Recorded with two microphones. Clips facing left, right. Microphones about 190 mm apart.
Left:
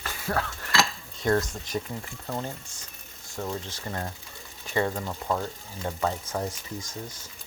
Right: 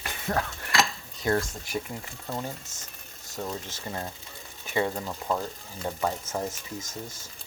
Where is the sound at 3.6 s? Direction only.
15° right (ahead or behind).